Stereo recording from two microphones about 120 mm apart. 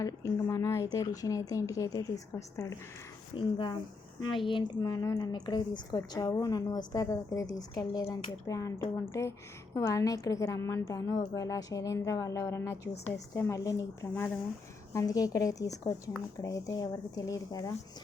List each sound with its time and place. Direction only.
0.0 s a woman's voice: 25° left (ahead or behind)
3.3 s a woman's voice: 45° left (ahead or behind)
6.0 s a woman's voice: 30° left (ahead or behind)